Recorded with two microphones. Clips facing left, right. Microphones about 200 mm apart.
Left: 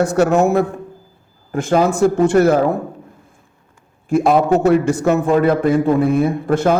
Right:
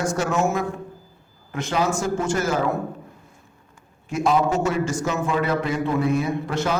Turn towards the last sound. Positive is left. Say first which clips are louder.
# left 8 dB
turn(degrees=55)  # may be behind; listen again after turning